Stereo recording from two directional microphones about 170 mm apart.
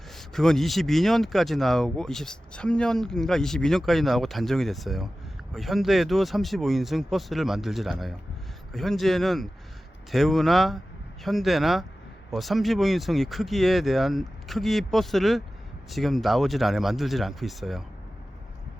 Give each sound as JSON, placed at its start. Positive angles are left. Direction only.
{"t": 0.1, "sound": "speech", "side_deg": 0}